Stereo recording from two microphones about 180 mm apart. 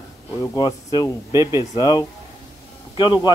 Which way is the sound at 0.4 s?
25° left (ahead or behind).